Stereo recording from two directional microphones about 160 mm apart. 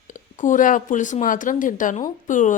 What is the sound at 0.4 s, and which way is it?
A woman's voice, 55° left (ahead or behind).